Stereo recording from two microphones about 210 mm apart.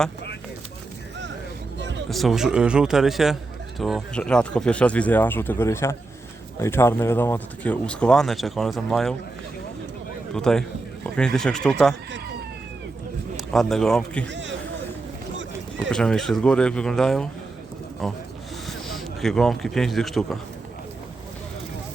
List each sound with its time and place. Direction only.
2.0 s speech: centre (ahead or behind)
10.3 s speech: 5° left (ahead or behind)
13.3 s speech: centre (ahead or behind)
14.3 s a sound: 60° right (ahead or behind)
15.9 s a man's voice: 5° left (ahead or behind)